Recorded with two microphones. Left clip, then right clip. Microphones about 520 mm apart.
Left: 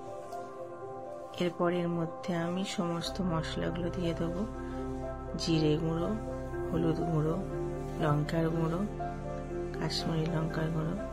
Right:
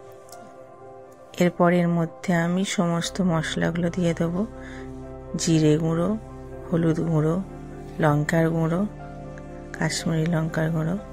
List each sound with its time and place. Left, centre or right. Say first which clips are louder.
1.4 s speech: right 10 dB; centre
5.3 s speech: right 9 dB; centre